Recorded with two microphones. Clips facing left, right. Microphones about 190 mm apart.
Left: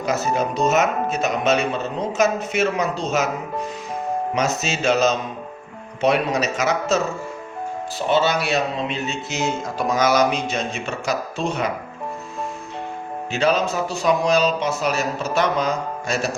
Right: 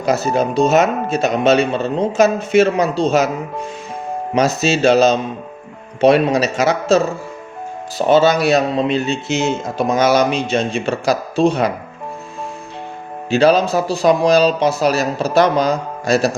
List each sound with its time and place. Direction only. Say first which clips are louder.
0.0 s speech: right 5 dB; 30° right (ahead or behind)
13.3 s speech: right 7 dB; 35° right (ahead or behind)